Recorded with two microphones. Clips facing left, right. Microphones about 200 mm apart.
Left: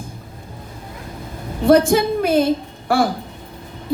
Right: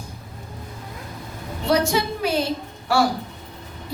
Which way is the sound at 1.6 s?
50° left (ahead or behind).